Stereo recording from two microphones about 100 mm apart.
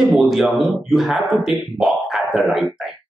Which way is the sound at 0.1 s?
5° right (ahead or behind).